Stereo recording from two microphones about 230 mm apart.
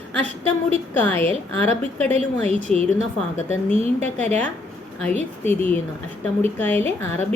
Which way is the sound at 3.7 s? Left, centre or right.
Right.